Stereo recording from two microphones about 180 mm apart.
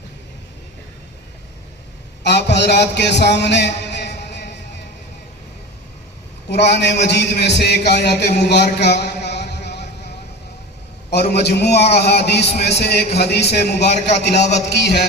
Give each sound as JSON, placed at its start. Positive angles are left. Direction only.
{"t": 2.2, "sound": "a sound", "side_deg": 70}
{"t": 6.5, "sound": "a man's voice", "side_deg": 70}
{"t": 11.1, "sound": "a man's voice", "side_deg": 65}
{"t": 12.4, "sound": "a man's voice", "side_deg": 35}
{"t": 12.6, "sound": "a man's voice", "side_deg": 70}